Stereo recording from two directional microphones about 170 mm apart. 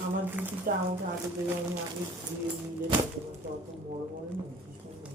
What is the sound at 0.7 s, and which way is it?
Speech, 55° right (ahead or behind).